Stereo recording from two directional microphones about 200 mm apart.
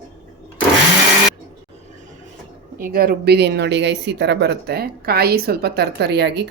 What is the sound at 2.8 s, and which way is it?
Speech, 50° right (ahead or behind).